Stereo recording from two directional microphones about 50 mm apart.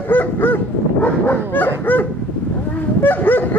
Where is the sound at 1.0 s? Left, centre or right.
Left.